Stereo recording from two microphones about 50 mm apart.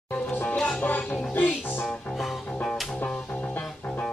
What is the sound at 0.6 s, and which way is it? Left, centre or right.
Music, left.